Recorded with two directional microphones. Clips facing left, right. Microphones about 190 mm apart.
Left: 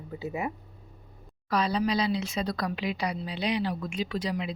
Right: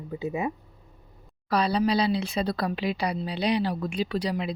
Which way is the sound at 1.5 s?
35° right (ahead or behind).